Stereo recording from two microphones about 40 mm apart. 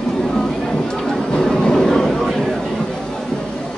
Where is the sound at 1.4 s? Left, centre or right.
Centre.